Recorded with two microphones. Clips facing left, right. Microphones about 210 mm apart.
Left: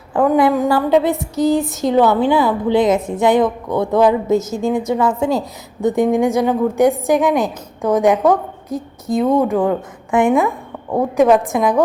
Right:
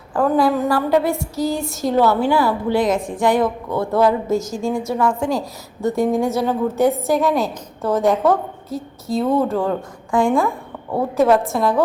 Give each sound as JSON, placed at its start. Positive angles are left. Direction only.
{"t": 0.1, "sound": "a woman's voice", "side_deg": 20}